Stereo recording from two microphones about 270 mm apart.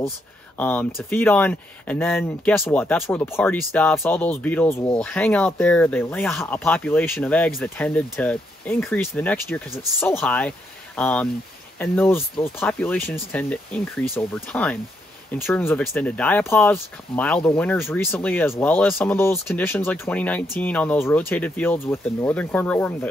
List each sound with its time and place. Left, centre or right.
0.6 s speech: centre